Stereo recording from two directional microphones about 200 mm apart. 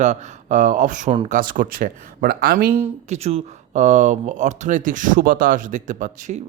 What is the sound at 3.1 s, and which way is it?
Speech, 30° right (ahead or behind).